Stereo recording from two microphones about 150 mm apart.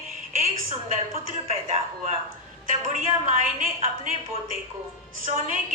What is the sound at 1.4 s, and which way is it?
Speech, 45° right (ahead or behind).